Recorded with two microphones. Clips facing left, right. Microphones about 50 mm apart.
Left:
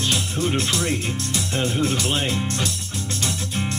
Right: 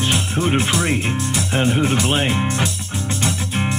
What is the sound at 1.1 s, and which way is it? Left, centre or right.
Speech, centre.